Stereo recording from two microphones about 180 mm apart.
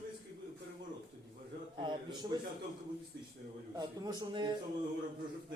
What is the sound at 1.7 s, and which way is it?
Speech, 25° right (ahead or behind).